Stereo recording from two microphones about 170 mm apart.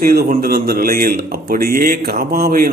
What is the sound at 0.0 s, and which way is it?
Speech, 65° right (ahead or behind).